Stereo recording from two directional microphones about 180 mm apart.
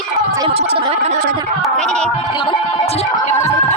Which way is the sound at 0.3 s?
30° right (ahead or behind).